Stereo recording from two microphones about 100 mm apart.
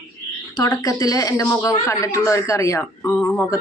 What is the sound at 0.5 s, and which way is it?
Speech, 40° left (ahead or behind).